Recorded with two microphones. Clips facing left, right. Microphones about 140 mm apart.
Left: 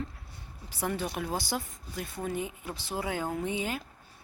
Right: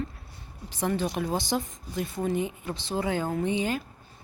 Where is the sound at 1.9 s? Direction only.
Centre (ahead or behind).